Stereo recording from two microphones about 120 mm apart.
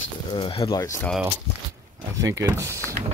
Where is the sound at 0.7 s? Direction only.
30° left (ahead or behind).